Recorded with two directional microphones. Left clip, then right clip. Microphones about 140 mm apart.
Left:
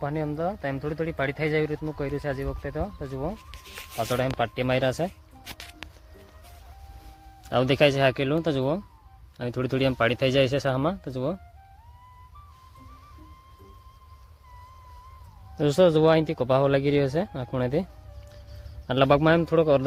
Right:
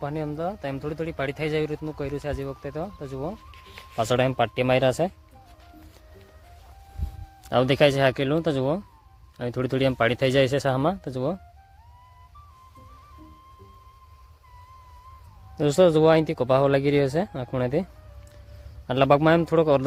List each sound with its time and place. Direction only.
0.0 s speech: 5° right (ahead or behind)
4.1 s speech: 80° right; by 5.1 s 45° right (ahead or behind)
7.5 s speech: 25° right (ahead or behind)
15.5 s speech: 20° right (ahead or behind)
18.9 s speech: 15° right (ahead or behind)